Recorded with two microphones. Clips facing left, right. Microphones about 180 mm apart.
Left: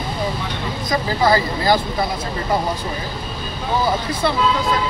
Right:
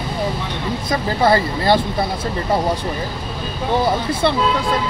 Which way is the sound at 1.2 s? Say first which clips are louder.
Right 2 dB; 30° right (ahead or behind).